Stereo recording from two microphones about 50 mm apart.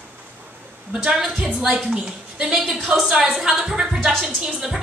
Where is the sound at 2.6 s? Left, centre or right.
Centre.